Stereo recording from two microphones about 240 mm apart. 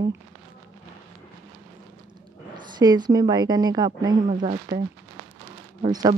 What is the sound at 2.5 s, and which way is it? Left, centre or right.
A woman's voice, centre.